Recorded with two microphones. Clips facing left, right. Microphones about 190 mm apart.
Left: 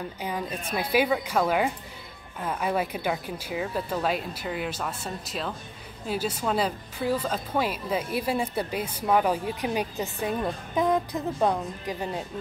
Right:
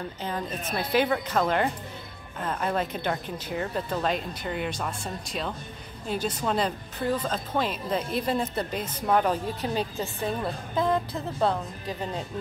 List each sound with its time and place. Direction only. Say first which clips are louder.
0.2 s a woman's voice: even; 10° left (ahead or behind)